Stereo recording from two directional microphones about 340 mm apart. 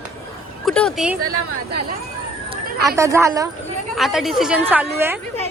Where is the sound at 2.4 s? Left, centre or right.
Centre.